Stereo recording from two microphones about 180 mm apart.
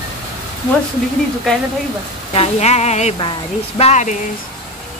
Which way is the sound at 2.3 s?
35° left (ahead or behind).